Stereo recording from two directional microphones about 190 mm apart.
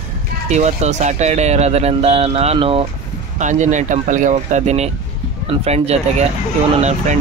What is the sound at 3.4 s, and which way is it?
Speech, 40° right (ahead or behind).